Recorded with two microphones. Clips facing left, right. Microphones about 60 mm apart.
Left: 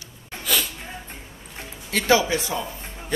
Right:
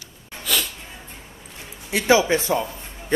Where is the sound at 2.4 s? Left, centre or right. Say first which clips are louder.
Right 5 dB; right.